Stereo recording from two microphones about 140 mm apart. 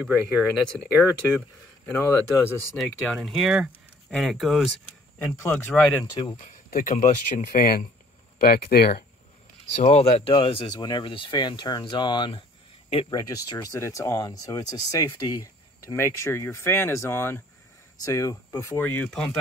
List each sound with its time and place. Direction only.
0.0 s speech: 10° right (ahead or behind)
1.9 s speech: 15° left (ahead or behind)
2.8 s speech: centre (ahead or behind)
5.2 s speech: 15° left (ahead or behind)
6.3 s speech: 70° left (ahead or behind); by 9.0 s 90° left
9.8 s speech: 50° left (ahead or behind)
13.3 s speech: 25° left (ahead or behind); by 19.3 s 5° left (ahead or behind)